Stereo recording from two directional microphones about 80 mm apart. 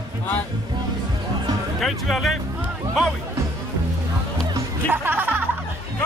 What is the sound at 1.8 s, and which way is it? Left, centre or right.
Speech, centre.